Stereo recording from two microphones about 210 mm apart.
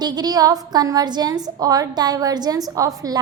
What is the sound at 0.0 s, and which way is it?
A woman's voice, 20° right (ahead or behind).